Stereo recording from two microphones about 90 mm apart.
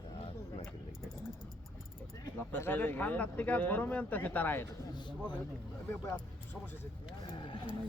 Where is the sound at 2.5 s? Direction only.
20° left (ahead or behind).